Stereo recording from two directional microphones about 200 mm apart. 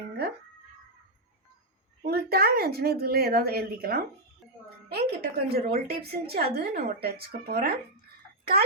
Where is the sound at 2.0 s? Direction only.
50° right (ahead or behind).